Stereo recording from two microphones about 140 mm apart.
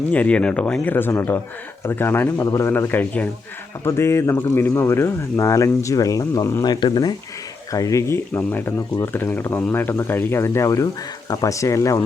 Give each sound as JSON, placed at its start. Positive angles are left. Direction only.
{"t": 0.1, "sound": "speech", "side_deg": 10}